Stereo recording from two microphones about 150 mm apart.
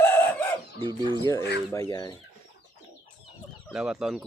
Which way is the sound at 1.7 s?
20° left (ahead or behind).